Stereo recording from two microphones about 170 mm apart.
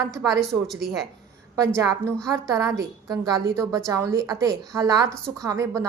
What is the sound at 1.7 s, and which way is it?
A woman's voice, 15° right (ahead or behind).